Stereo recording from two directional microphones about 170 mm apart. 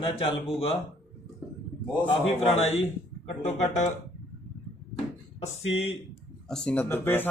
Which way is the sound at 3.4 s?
40° left (ahead or behind).